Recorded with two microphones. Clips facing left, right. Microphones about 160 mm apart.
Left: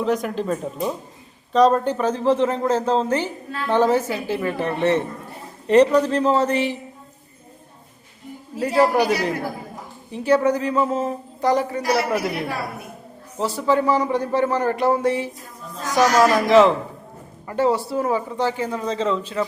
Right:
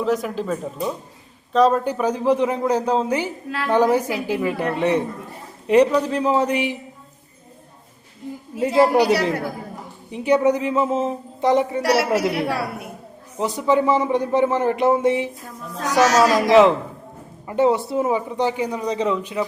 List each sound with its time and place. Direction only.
0.0 s speech: centre (ahead or behind)
8.5 s speech: 20° right (ahead or behind)
10.1 s speech: 15° right (ahead or behind)
11.8 s a woman's voice: 75° right (ahead or behind)
13.4 s speech: 20° right (ahead or behind)
15.8 s a woman's voice: 75° right (ahead or behind)
16.2 s speech: 15° right (ahead or behind)